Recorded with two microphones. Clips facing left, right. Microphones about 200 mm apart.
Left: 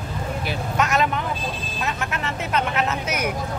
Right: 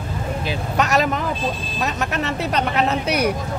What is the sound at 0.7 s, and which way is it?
Vehicle, 40° right (ahead or behind).